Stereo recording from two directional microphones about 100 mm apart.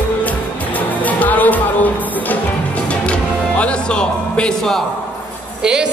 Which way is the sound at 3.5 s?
10° left (ahead or behind).